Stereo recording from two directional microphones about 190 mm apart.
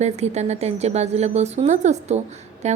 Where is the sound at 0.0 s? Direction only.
35° right (ahead or behind).